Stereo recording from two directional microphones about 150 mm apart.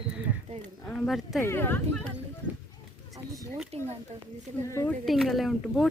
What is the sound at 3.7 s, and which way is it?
Speech, 40° right (ahead or behind).